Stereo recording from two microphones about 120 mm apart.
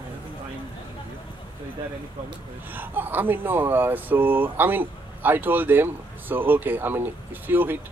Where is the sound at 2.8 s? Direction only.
15° right (ahead or behind).